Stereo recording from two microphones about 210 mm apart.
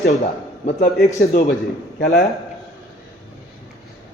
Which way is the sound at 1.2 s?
45° left (ahead or behind).